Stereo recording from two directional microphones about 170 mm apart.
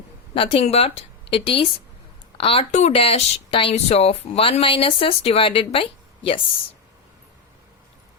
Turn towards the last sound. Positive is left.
turn(degrees=30)  # may be behind; listen again after turning